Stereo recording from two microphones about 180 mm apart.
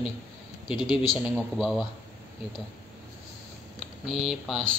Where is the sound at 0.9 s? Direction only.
Centre (ahead or behind).